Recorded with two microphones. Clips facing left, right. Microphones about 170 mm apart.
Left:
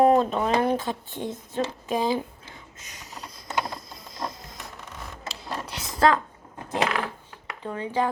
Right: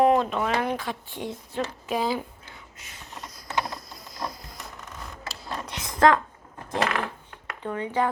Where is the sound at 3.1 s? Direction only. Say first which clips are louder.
Left 1 dB; centre (ahead or behind).